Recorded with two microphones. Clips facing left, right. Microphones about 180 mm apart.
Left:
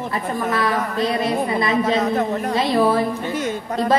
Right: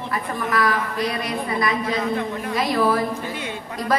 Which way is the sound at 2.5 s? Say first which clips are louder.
Left 2 dB; 25° left (ahead or behind).